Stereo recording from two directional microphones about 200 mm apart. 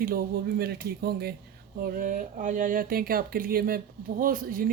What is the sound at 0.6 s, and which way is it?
A woman's voice, 50° right (ahead or behind).